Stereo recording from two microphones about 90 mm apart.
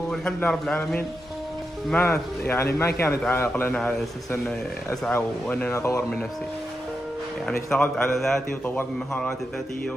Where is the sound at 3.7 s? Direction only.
5° left (ahead or behind).